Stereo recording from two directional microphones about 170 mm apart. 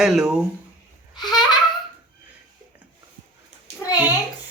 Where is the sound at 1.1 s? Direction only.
25° left (ahead or behind).